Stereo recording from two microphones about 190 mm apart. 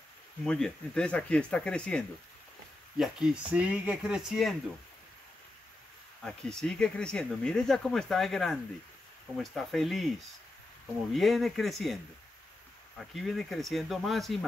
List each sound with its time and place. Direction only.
0.5 s speech: 5° left (ahead or behind)
6.2 s speech: 5° left (ahead or behind)
11.1 s speech: centre (ahead or behind)